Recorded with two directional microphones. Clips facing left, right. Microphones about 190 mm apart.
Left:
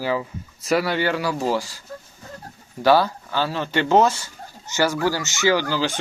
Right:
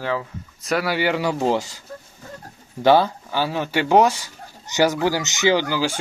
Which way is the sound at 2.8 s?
20° right (ahead or behind).